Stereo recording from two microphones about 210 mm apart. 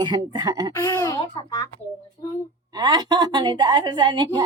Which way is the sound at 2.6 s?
20° right (ahead or behind).